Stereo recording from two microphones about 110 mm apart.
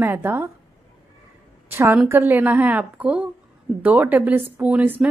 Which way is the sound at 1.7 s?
20° right (ahead or behind).